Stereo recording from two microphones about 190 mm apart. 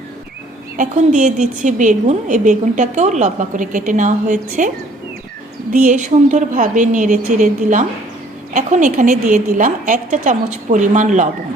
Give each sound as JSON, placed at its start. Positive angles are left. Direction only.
{"t": 0.8, "sound": "a woman's voice", "side_deg": -40}
{"t": 5.7, "sound": "a woman's voice", "side_deg": -45}